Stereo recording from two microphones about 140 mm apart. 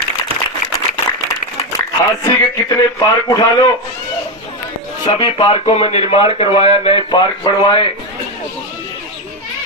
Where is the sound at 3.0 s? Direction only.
30° left (ahead or behind).